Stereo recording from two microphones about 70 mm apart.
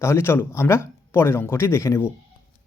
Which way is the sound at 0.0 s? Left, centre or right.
Left.